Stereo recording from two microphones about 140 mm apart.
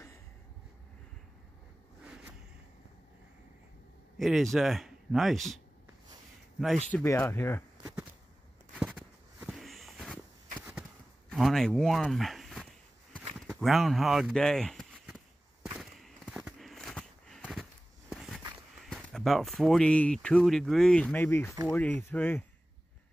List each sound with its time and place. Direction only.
4.2 s speech: centre (ahead or behind)
7.1 s speech: 15° left (ahead or behind)
8.7 s walk: 5° right (ahead or behind)
10.6 s a sound: 5° right (ahead or behind)
11.2 s speech: centre (ahead or behind)
13.3 s a sound: centre (ahead or behind)
18.9 s speech: 5° left (ahead or behind)